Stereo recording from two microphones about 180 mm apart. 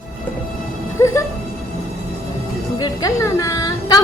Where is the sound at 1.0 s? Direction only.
15° left (ahead or behind).